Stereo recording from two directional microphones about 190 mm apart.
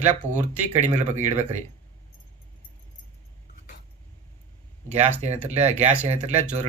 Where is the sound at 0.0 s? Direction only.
40° right (ahead or behind).